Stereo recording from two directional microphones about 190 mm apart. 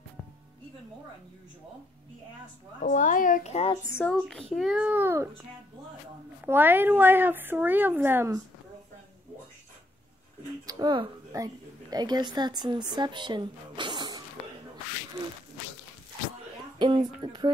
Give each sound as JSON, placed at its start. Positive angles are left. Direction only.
{"t": 2.8, "sound": "a woman's voice", "side_deg": 45}
{"t": 3.9, "sound": "speech", "side_deg": 5}
{"t": 6.4, "sound": "speech", "side_deg": -10}
{"t": 10.7, "sound": "a woman's voice", "side_deg": -20}
{"t": 16.7, "sound": "speech", "side_deg": -25}